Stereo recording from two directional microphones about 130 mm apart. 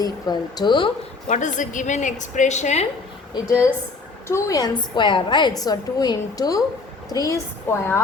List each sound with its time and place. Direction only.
0.0 s speech: 30° left (ahead or behind)
1.3 s a woman's voice: 75° left (ahead or behind)
4.3 s a woman's voice: 25° left (ahead or behind)
4.8 s a woman's voice: 35° left (ahead or behind); by 8.0 s 20° left (ahead or behind)